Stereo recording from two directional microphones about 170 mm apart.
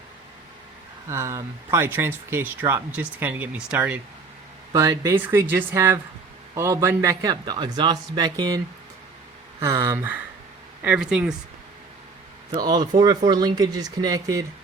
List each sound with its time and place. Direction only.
1.1 s speech: 15° right (ahead or behind)
4.7 s a man's voice: 20° right (ahead or behind)
12.5 s a man's voice: 25° right (ahead or behind)